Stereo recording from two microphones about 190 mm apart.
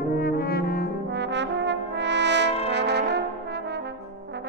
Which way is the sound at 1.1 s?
65° right (ahead or behind).